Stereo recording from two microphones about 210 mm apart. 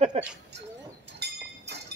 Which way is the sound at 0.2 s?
30° right (ahead or behind).